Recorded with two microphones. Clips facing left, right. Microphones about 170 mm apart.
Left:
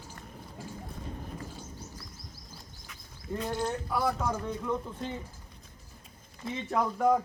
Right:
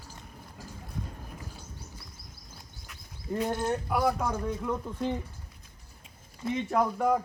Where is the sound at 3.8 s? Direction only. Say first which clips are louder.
Right 4 dB; 10° right (ahead or behind).